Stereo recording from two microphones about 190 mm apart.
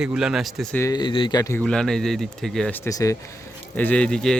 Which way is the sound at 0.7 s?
15° left (ahead or behind).